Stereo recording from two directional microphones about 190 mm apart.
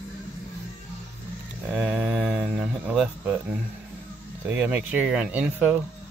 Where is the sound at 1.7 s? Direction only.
5° right (ahead or behind).